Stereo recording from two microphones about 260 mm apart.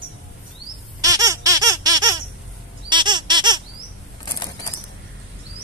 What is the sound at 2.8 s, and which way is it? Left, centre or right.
Squeak, centre.